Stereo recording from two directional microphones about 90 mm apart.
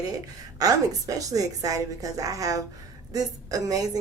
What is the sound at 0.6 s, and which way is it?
A woman's voice, 40° right (ahead or behind).